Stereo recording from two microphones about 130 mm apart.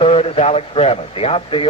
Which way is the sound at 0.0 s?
50° left (ahead or behind).